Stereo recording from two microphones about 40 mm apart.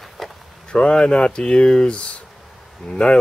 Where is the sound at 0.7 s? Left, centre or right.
Left.